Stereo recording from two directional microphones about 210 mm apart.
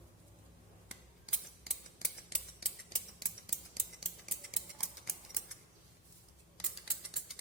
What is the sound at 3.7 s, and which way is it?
Scissors, centre (ahead or behind).